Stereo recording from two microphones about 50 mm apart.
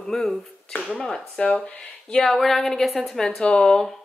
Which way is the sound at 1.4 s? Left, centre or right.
Left.